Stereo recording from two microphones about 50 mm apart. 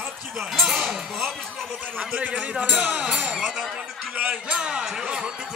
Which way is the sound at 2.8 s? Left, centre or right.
Right.